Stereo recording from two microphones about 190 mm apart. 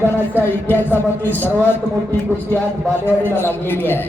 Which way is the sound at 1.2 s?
10° left (ahead or behind).